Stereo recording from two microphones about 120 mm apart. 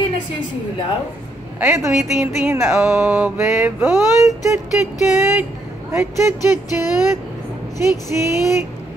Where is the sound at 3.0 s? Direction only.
10° right (ahead or behind).